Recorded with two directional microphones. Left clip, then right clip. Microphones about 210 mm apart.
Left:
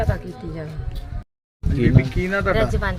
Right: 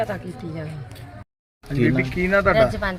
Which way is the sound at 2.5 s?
5° left (ahead or behind).